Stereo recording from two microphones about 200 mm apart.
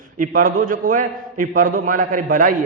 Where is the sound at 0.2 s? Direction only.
45° right (ahead or behind).